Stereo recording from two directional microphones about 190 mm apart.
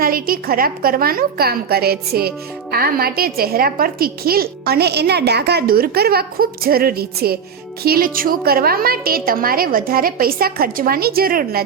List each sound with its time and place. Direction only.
0.0 s a woman's voice: 50° right (ahead or behind)